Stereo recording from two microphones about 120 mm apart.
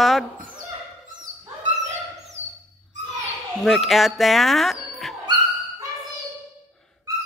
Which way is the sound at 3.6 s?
Centre (ahead or behind).